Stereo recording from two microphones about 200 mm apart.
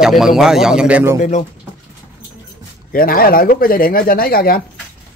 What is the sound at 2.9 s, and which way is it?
Speech, 45° left (ahead or behind).